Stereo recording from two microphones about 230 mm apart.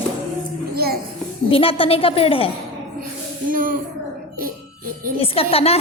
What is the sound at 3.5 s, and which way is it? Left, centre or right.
Speech, right.